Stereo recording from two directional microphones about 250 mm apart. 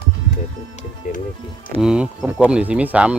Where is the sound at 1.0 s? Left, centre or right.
Left.